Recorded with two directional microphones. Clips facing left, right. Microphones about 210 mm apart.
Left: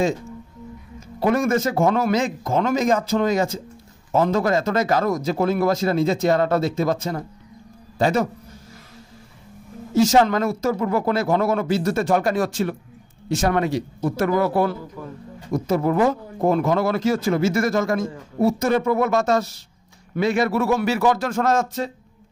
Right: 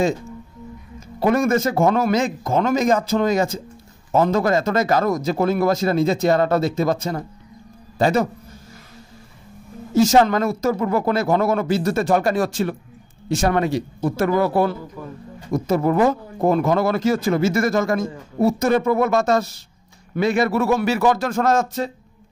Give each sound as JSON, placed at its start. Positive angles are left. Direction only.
{"t": 1.2, "sound": "a man's voice", "side_deg": -40}
{"t": 9.9, "sound": "a man's voice", "side_deg": -40}
{"t": 15.0, "sound": "speech", "side_deg": -15}
{"t": 15.5, "sound": "speech", "side_deg": -45}